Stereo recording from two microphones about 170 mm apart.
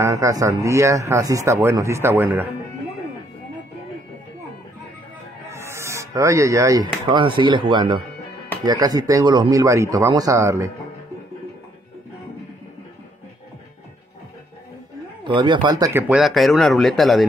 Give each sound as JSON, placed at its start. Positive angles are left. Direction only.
{"t": 0.0, "sound": "speech", "side_deg": -20}
{"t": 5.5, "sound": "speech", "side_deg": -15}
{"t": 15.2, "sound": "speech", "side_deg": -30}
{"t": 16.2, "sound": "speech", "side_deg": 0}